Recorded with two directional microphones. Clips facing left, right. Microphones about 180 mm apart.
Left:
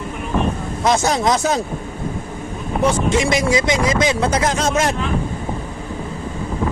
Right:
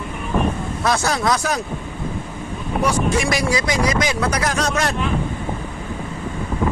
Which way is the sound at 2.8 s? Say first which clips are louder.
Left 3 dB; 20° left (ahead or behind).